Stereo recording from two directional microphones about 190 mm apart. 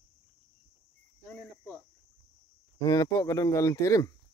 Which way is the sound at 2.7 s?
20° left (ahead or behind).